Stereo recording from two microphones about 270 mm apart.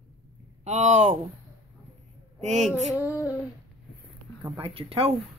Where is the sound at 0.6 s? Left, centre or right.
Right.